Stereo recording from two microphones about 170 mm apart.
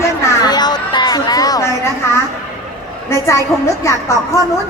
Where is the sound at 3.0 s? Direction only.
15° left (ahead or behind).